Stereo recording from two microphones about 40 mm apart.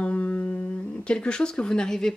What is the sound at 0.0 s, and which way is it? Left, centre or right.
Music, left.